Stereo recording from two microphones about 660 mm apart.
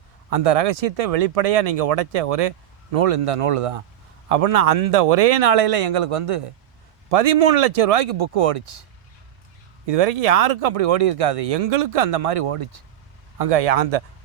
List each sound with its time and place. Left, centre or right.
0.3 s speech: right
9.8 s speech: right
13.4 s speech: right